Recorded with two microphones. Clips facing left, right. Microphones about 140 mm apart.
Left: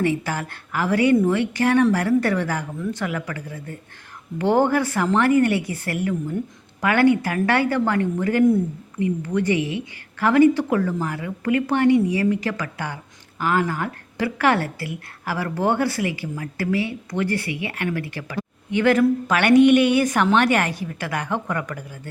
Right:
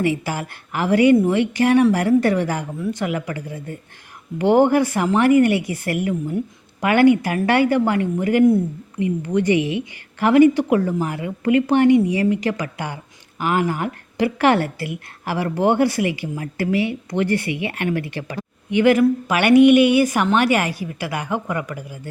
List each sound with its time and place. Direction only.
0.0 s a woman's voice: 10° right (ahead or behind)